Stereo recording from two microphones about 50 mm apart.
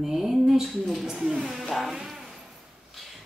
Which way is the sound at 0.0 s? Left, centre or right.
Centre.